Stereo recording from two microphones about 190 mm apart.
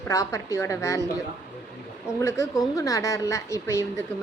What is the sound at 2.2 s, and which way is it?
A woman's voice, 15° left (ahead or behind).